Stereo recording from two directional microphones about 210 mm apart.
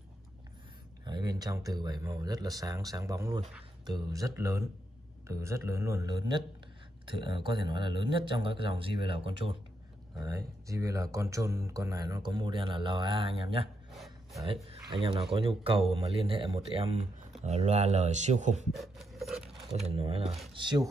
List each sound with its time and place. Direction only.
1.0 s speech: 20° right (ahead or behind)
13.9 s gasp: centre (ahead or behind)
14.9 s speech: 25° right (ahead or behind)
18.8 s filing: centre (ahead or behind)
20.0 s speech: 25° right (ahead or behind)